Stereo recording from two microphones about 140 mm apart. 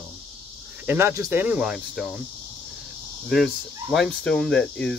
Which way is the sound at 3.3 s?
Centre (ahead or behind).